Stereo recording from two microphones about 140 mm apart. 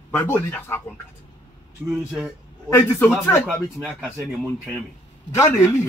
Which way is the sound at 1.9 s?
5° right (ahead or behind).